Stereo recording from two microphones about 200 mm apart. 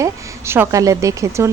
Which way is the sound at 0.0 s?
10° right (ahead or behind).